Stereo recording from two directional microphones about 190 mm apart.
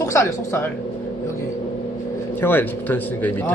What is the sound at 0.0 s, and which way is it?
Speech, 15° left (ahead or behind).